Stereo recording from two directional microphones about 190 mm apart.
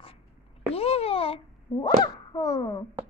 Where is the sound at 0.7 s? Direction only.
30° left (ahead or behind).